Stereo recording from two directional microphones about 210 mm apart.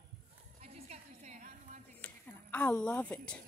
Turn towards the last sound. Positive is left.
turn(degrees=5)  # may be behind; listen again after turning